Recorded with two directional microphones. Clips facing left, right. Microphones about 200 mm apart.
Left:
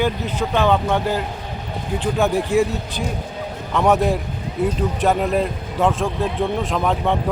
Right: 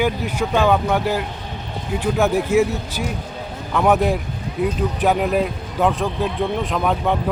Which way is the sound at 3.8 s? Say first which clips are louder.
Even; centre (ahead or behind).